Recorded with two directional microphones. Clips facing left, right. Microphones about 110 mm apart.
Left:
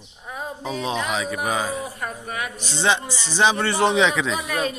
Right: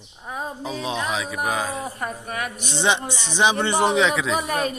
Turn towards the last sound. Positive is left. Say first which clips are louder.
# right 1 dB
turn(degrees=-45)  # may be behind; listen again after turning